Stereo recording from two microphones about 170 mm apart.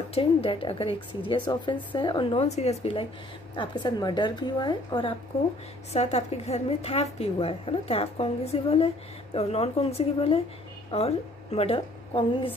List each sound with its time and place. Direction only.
0.1 s a woman's voice: 35° left (ahead or behind)
2.4 s a woman's voice: 40° left (ahead or behind)
5.9 s a woman's voice: 40° left (ahead or behind)